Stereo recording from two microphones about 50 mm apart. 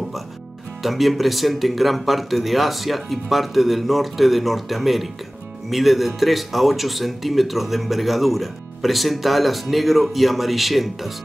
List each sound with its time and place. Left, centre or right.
0.8 s speech: centre